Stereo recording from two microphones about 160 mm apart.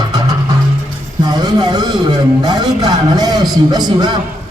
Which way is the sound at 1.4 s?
25° right (ahead or behind).